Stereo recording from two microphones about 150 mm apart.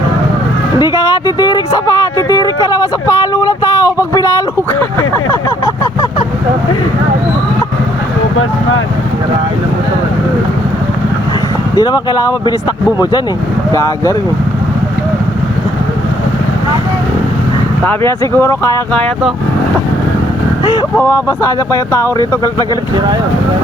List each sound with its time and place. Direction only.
0.8 s a sound: 25° left (ahead or behind)
11.7 s speech: 25° left (ahead or behind)
18.3 s speech: 20° left (ahead or behind)
21.0 s speech: 20° left (ahead or behind)